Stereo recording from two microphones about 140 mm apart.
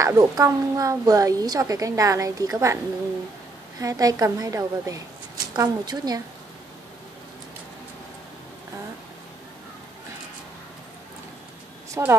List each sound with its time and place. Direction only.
0.0 s a woman's voice: 25° right (ahead or behind)
3.8 s a woman's voice: 25° right (ahead or behind)
12.0 s a woman's voice: 20° right (ahead or behind)